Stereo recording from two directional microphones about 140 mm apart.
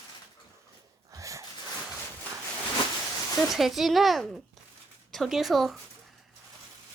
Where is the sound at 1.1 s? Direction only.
25° right (ahead or behind).